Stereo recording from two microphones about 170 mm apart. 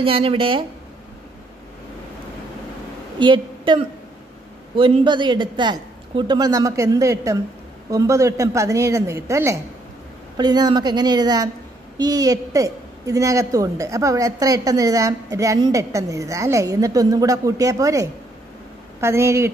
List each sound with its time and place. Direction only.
0.0 s speech: 35° right (ahead or behind)
3.2 s a woman's voice: 30° right (ahead or behind)